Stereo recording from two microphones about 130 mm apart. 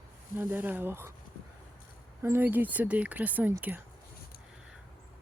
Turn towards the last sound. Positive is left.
turn(degrees=-10)  # may be behind; listen again after turning